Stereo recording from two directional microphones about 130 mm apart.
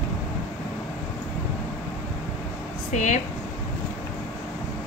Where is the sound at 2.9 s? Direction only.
70° left (ahead or behind).